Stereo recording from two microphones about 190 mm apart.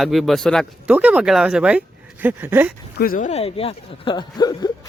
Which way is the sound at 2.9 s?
50° left (ahead or behind).